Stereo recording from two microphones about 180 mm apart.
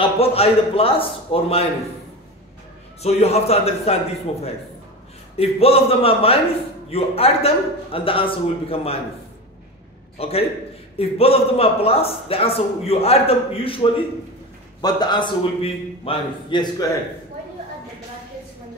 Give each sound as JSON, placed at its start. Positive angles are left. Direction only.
{"t": 0.0, "sound": "a man's voice", "side_deg": 35}
{"t": 3.0, "sound": "a man's voice", "side_deg": 35}
{"t": 5.4, "sound": "a man's voice", "side_deg": 35}
{"t": 10.1, "sound": "a man's voice", "side_deg": 35}